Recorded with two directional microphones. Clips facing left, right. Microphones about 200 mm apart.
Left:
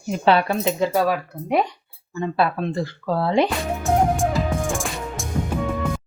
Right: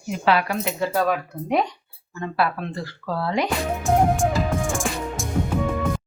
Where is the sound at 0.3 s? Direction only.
25° left (ahead or behind).